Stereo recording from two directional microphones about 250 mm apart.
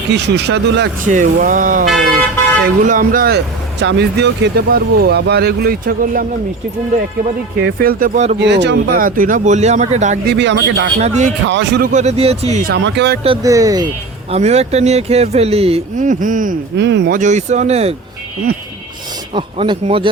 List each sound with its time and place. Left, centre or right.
0.1 s speech: right
2.8 s speech: right
7.8 s speech: right
8.4 s speech: right
10.2 s speech: right
11.0 s speech: right
11.4 s speech: right
12.7 s speech: right
13.2 s speech: centre
16.7 s speech: right
17.2 s speech: right
19.3 s speech: right